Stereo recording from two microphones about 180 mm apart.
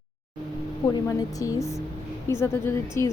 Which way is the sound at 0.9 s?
20° left (ahead or behind).